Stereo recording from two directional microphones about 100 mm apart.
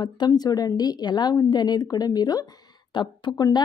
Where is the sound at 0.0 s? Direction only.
45° left (ahead or behind).